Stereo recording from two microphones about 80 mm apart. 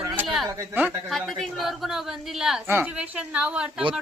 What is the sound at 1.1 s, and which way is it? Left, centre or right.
A woman's voice, centre.